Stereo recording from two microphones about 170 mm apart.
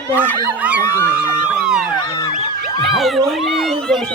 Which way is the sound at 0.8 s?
15° left (ahead or behind).